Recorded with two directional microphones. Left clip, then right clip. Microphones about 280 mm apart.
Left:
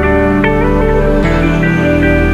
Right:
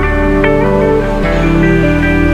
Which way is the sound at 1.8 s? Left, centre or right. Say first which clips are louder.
Left 1 dB; centre.